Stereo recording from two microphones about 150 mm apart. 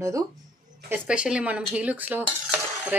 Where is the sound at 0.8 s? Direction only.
10° right (ahead or behind).